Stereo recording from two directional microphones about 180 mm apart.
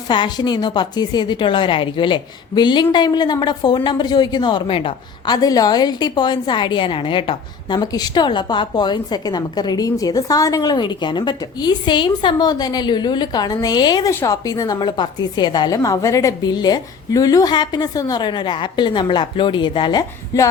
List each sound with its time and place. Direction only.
0.1 s a woman's voice: 25° left (ahead or behind)